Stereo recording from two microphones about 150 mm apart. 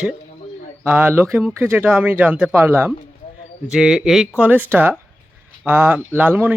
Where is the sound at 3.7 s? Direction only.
5° right (ahead or behind).